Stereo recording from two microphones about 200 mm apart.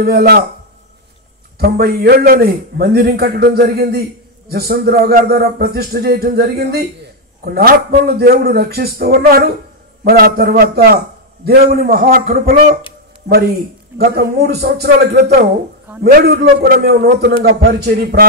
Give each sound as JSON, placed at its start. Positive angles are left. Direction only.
{"t": 0.0, "sound": "a man's voice", "side_deg": -50}
{"t": 1.6, "sound": "a man's voice", "side_deg": -50}